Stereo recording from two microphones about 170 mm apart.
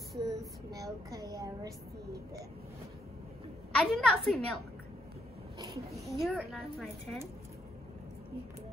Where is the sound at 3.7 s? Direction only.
Centre (ahead or behind).